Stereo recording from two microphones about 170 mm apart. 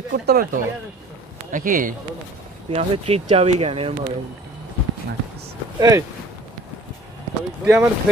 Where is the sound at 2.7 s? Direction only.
35° right (ahead or behind).